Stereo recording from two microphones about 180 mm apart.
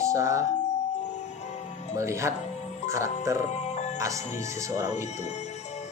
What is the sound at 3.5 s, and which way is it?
Music, 40° left (ahead or behind).